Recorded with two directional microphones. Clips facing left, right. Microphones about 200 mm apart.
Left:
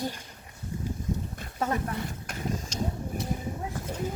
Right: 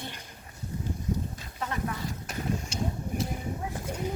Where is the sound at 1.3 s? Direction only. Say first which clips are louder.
Left 6 dB; 45° left (ahead or behind).